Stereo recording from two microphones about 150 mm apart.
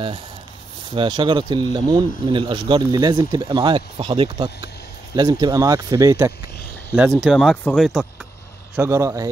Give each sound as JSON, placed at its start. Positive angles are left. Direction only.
{"t": 0.8, "sound": "speech", "side_deg": -30}
{"t": 7.0, "sound": "speech", "side_deg": 0}
{"t": 8.7, "sound": "speech", "side_deg": -20}